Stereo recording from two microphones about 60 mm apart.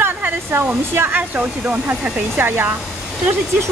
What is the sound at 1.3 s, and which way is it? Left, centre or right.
Speech, right.